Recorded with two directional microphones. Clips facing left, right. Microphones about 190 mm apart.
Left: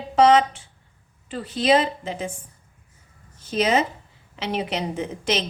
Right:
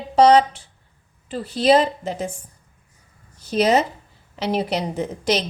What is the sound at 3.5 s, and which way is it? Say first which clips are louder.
A woman's voice: right 3 dB; 40° right (ahead or behind).